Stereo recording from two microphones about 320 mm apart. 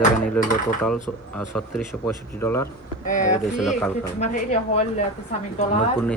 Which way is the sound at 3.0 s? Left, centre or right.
Left.